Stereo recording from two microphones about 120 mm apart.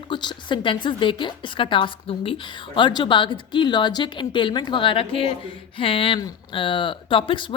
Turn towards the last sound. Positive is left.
turn(degrees=45)  # may be behind; listen again after turning